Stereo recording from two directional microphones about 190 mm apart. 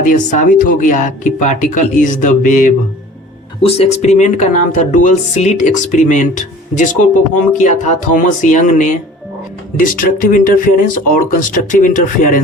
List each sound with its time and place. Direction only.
0.0 s speech: 40° left (ahead or behind)